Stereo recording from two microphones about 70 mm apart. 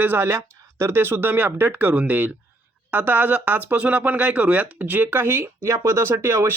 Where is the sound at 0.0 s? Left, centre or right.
Right.